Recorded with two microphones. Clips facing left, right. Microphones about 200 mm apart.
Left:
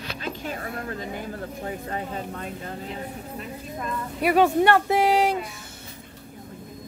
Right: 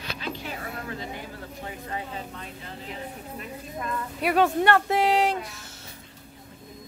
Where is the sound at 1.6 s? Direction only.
45° left (ahead or behind).